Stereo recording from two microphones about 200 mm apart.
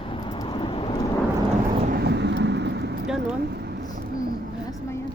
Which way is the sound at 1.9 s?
55° right (ahead or behind).